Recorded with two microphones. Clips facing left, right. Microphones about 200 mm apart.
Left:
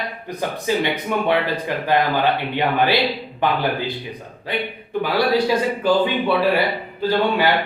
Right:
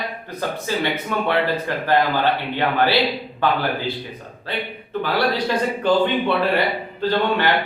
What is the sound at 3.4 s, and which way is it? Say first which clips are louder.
Speech: even; 15° left (ahead or behind).